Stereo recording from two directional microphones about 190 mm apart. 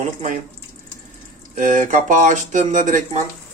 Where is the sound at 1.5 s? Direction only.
45° right (ahead or behind).